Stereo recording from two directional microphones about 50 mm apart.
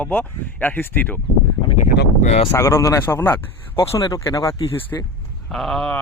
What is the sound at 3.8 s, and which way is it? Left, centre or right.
Speech, left.